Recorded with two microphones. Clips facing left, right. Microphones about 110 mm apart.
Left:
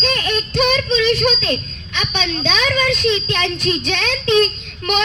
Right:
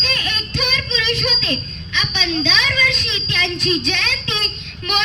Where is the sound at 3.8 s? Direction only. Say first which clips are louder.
Left 6 dB; 45° left (ahead or behind).